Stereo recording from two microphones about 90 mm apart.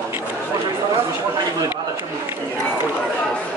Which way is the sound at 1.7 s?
25° right (ahead or behind).